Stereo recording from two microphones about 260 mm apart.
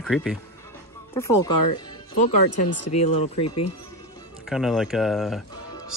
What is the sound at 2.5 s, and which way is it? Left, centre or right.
Speech, left.